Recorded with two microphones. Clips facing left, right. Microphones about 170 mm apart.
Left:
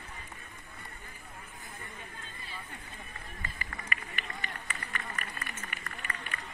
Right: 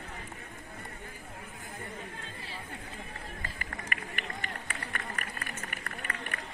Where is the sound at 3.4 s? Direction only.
55° right (ahead or behind).